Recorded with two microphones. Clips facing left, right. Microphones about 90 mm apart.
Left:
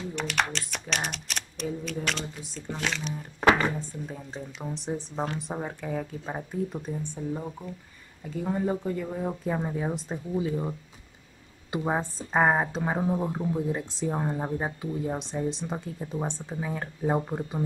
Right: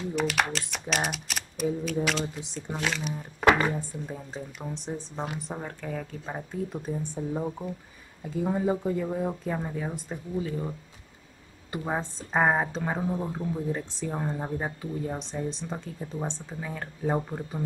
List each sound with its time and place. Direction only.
0.1 s speech: 5° right (ahead or behind)
2.4 s speech: 15° right (ahead or behind)
2.8 s speech: 5° right (ahead or behind)
5.4 s a woman's voice: 15° left (ahead or behind)
6.8 s a woman's voice: 10° right (ahead or behind); by 17.6 s 10° left (ahead or behind)